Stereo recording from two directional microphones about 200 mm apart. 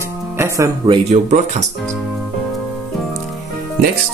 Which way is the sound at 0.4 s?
20° right (ahead or behind).